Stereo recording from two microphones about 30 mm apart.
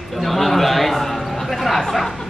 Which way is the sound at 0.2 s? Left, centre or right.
Centre.